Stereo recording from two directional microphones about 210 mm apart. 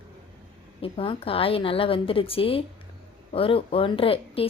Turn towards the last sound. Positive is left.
turn(degrees=25)  # may be behind; listen again after turning